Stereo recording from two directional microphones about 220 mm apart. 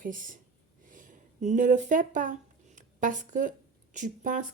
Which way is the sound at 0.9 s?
35° right (ahead or behind).